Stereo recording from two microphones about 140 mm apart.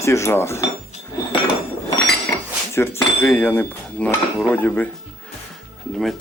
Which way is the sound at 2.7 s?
20° left (ahead or behind).